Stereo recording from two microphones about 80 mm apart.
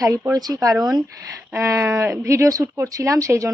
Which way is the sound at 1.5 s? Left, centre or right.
Right.